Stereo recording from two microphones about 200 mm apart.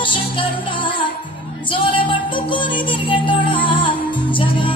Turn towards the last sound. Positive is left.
turn(degrees=25)  # may be behind; listen again after turning